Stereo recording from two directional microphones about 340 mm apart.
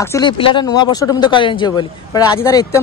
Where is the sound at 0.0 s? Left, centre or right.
Centre.